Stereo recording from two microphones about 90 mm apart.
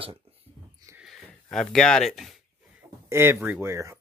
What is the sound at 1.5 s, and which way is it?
Speech, 5° left (ahead or behind).